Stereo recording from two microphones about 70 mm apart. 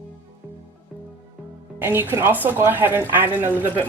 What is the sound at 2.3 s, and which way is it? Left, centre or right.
A woman's voice, right.